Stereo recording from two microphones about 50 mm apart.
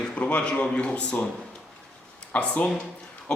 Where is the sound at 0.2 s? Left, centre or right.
Left.